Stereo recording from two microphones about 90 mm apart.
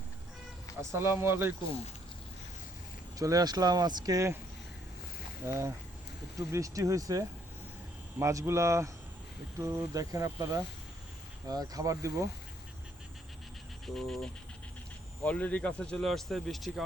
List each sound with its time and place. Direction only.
0.8 s speech: 30° right (ahead or behind)
3.2 s speech: 40° right (ahead or behind)
5.5 s speech: 30° right (ahead or behind)
9.9 s speech: 40° right (ahead or behind)
13.8 s speech: 5° left (ahead or behind)
15.2 s speech: 15° left (ahead or behind); by 16.8 s centre (ahead or behind)